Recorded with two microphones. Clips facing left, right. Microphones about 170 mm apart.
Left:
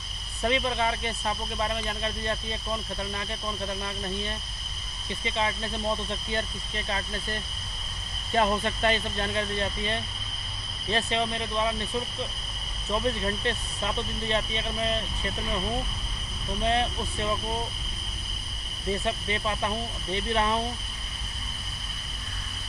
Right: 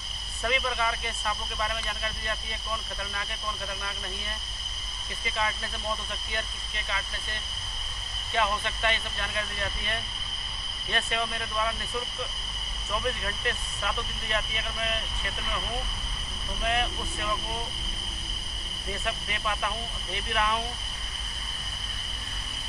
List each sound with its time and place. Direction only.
0.4 s speech: 30° left (ahead or behind)
5.2 s speech: 25° left (ahead or behind)
8.3 s speech: 40° left (ahead or behind)
12.9 s speech: 30° left (ahead or behind)
16.6 s speech: 30° left (ahead or behind)
19.0 s speech: 30° left (ahead or behind)